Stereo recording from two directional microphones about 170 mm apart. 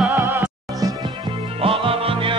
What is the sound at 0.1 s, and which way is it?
Music, 15° right (ahead or behind).